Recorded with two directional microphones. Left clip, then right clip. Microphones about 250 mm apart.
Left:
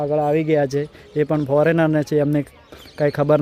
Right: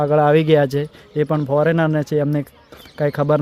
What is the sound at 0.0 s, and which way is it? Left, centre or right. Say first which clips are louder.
Speech: right 4 dB; right.